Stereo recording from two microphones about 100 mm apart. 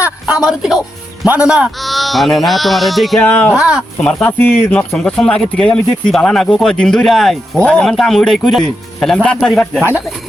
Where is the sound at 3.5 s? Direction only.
5° right (ahead or behind).